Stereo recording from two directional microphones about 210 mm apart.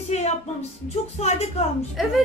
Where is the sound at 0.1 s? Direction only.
30° left (ahead or behind).